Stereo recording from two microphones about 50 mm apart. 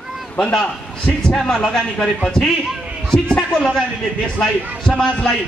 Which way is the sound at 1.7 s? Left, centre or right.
Centre.